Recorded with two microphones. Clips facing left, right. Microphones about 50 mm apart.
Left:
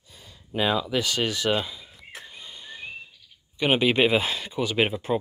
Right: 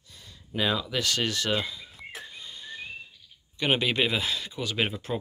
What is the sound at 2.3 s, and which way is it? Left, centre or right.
Whistling, centre.